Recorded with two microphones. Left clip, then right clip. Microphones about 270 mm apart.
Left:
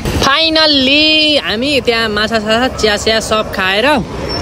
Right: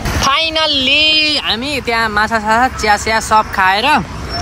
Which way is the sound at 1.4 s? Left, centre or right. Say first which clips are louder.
Left 4 dB; centre.